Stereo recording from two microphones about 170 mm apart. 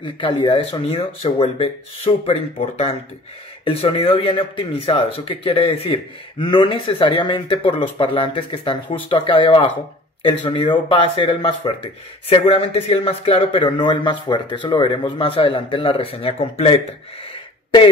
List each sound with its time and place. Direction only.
0.0 s speech: 30° left (ahead or behind)